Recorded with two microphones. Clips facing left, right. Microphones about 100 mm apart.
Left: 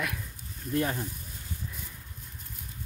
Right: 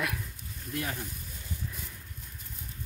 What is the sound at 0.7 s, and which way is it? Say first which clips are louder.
Speech: left 6 dB; 35° left (ahead or behind).